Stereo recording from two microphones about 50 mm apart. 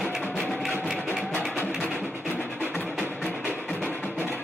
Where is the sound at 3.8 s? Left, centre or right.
Left.